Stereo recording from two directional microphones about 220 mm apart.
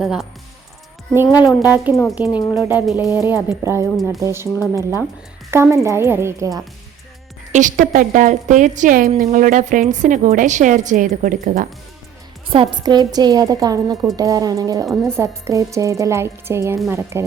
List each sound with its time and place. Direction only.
0.0 s speech: centre (ahead or behind)
2.3 s speech: 20° left (ahead or behind)
2.6 s speech: 5° right (ahead or behind)
5.5 s speech: 10° right (ahead or behind)
7.5 s a woman's voice: 35° right (ahead or behind)
12.5 s speech: 20° right (ahead or behind)